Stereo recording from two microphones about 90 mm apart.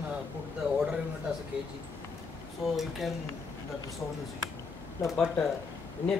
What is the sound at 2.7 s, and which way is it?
Speech, centre (ahead or behind).